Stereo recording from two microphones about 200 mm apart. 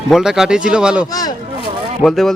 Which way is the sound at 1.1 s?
20° left (ahead or behind).